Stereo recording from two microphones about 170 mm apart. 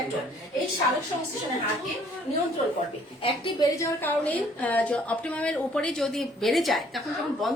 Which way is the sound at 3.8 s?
10° left (ahead or behind).